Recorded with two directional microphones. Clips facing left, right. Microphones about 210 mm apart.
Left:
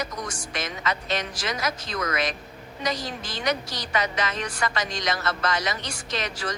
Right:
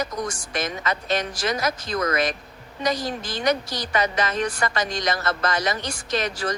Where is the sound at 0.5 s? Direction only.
45° right (ahead or behind).